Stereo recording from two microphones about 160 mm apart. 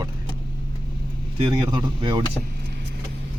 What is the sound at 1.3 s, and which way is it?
Speech, 30° right (ahead or behind).